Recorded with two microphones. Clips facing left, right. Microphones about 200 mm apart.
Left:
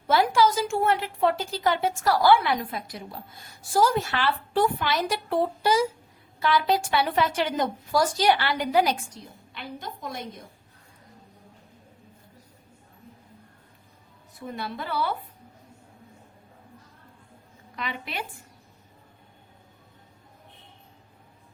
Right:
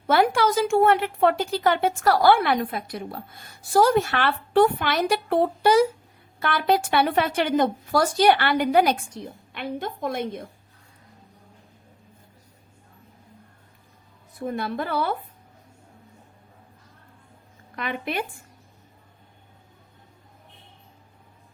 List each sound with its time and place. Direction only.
0.1 s a woman's voice: 60° right (ahead or behind)
14.3 s speech: 50° right (ahead or behind)
17.7 s speech: 50° right (ahead or behind)